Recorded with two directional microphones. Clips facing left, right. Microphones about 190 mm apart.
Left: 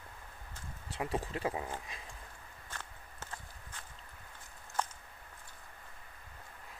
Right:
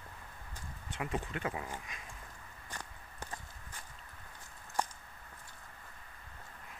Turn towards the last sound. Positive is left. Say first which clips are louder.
# right 1 dB
turn(degrees=-15)  # may be behind; listen again after turning